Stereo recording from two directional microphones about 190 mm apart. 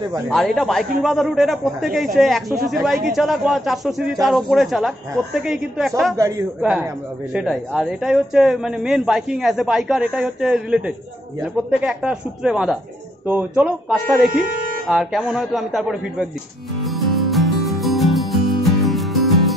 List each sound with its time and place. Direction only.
0.3 s speech: centre (ahead or behind)
6.1 s speech: 15° right (ahead or behind)
6.6 s speech: 5° right (ahead or behind)
16.8 s music: centre (ahead or behind)